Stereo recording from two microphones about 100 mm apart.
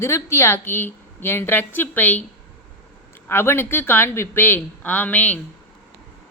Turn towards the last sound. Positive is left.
turn(degrees=15)  # may be behind; listen again after turning